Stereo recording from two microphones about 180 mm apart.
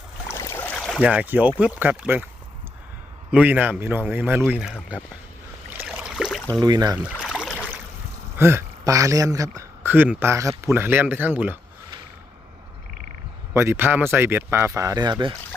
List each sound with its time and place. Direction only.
0.3 s boat: 15° left (ahead or behind); by 1.5 s 10° right (ahead or behind)
1.5 s speech: 10° right (ahead or behind)
3.3 s speech: 10° right (ahead or behind)
5.7 s a sound: 5° right (ahead or behind)
6.5 s speech: 20° right (ahead or behind)
7.2 s rowboat: centre (ahead or behind)
8.4 s speech: 15° right (ahead or behind)
13.5 s speech: 15° right (ahead or behind)